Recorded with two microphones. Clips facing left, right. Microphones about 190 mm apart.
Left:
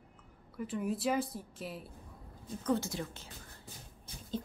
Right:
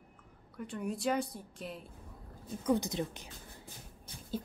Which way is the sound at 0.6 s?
Centre (ahead or behind).